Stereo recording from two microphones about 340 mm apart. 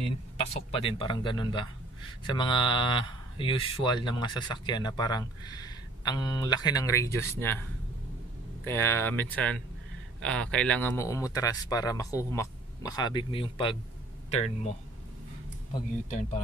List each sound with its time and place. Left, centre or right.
0.5 s speech: centre
8.6 s speech: centre